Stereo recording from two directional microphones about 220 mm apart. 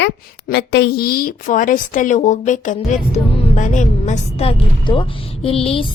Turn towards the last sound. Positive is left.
turn(degrees=25)  # may be behind; listen again after turning